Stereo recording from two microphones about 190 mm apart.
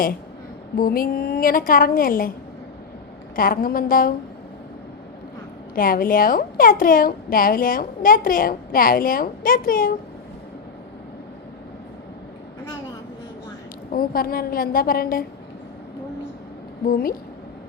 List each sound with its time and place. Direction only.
0.8 s a woman's voice: 50° left (ahead or behind)
3.3 s a woman's voice: 50° left (ahead or behind)
5.7 s a woman's voice: 50° left (ahead or behind)
13.9 s a woman's voice: 50° left (ahead or behind)
16.8 s a woman's voice: 50° left (ahead or behind)